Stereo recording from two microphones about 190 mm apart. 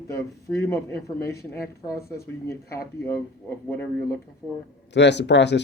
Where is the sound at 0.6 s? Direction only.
15° left (ahead or behind).